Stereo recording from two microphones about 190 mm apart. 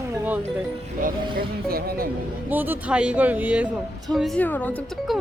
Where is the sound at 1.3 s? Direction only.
50° right (ahead or behind).